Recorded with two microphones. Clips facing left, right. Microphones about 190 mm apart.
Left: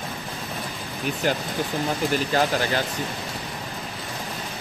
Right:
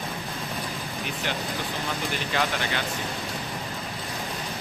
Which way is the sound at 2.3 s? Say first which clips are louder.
Left 3 dB; 40° left (ahead or behind).